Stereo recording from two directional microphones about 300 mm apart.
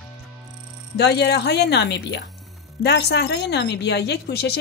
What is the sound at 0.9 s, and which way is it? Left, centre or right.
A woman's voice, left.